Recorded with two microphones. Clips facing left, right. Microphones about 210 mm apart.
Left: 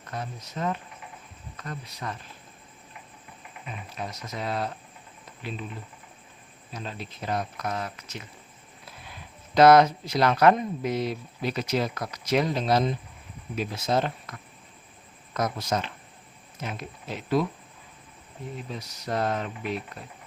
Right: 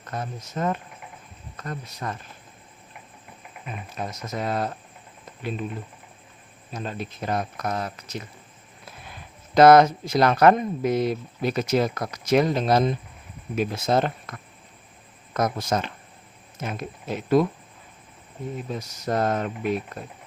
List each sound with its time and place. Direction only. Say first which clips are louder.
0.1 s speech: right 3 dB; 45° right (ahead or behind)
3.9 s speech: right 4 dB; 45° right (ahead or behind)
6.7 s speech: right 5 dB; 50° right (ahead or behind)
9.6 s speech: right 3 dB; 45° right (ahead or behind)
18.7 s speech: right 4 dB; 45° right (ahead or behind)